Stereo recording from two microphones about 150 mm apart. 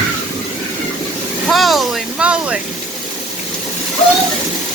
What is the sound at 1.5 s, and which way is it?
Vehicle, centre (ahead or behind).